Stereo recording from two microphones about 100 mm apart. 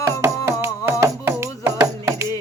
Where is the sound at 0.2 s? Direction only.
25° right (ahead or behind).